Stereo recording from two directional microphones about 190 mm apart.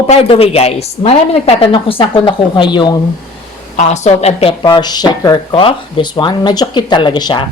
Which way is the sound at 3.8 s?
35° left (ahead or behind).